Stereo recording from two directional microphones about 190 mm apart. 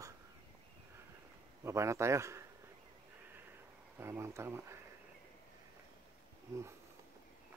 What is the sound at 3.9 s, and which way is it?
Speech, 15° right (ahead or behind).